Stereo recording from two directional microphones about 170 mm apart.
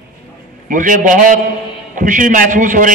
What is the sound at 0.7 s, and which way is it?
A man's voice, 50° right (ahead or behind).